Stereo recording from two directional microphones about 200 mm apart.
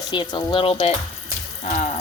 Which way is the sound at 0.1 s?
25° left (ahead or behind).